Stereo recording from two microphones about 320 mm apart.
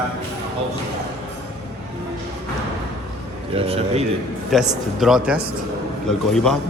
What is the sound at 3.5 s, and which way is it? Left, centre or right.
Speech, centre.